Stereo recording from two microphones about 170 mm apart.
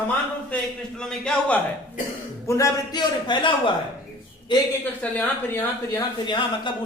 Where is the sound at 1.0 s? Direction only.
5° left (ahead or behind).